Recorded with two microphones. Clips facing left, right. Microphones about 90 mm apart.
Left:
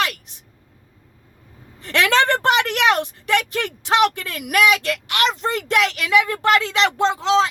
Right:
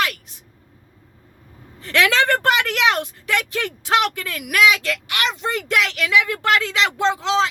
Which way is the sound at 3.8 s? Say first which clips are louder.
Left 3 dB; 25° left (ahead or behind).